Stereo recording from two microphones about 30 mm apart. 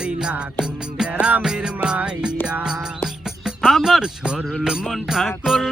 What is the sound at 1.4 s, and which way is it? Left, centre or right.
Music, right.